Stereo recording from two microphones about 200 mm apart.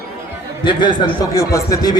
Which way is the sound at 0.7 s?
25° left (ahead or behind).